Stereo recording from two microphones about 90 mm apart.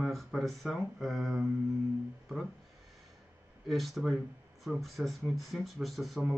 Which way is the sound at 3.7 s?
Centre (ahead or behind).